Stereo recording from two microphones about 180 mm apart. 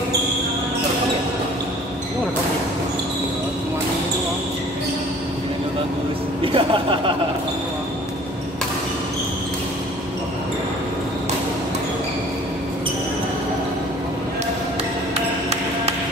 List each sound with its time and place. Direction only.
6.4 s speech: 30° right (ahead or behind)